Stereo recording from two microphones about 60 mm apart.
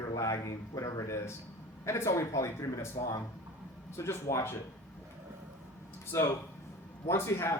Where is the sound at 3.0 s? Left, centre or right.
Left.